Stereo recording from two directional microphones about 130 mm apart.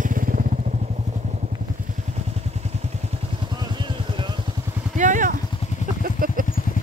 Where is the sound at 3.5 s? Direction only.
35° right (ahead or behind).